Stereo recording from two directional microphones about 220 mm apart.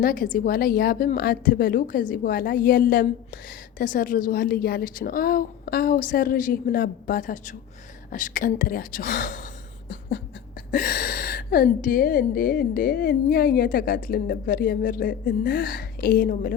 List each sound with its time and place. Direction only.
0.0 s a woman's voice: 40° left (ahead or behind)
10.7 s a woman's voice: 40° left (ahead or behind)